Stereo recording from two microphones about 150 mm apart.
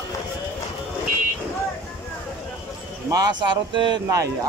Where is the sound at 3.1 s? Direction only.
30° right (ahead or behind).